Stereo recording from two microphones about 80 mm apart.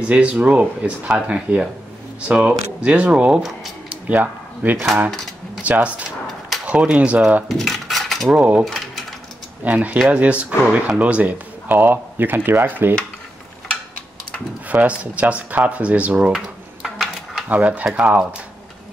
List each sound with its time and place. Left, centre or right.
0.0 s speech: centre
7.4 s cutlery: centre
8.3 s speech: centre
8.6 s mechanisms: centre
9.7 s speech: centre
14.7 s speech: centre
16.3 s a sound: centre
17.5 s speech: centre